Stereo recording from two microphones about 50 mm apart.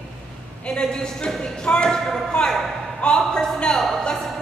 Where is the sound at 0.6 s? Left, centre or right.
Centre.